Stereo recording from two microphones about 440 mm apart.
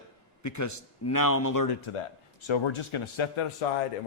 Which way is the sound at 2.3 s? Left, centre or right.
Left.